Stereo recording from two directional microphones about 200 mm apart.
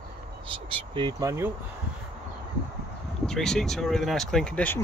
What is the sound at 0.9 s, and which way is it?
Speech, 20° right (ahead or behind).